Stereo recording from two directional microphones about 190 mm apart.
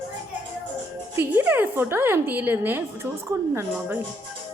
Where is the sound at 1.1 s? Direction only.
10° right (ahead or behind).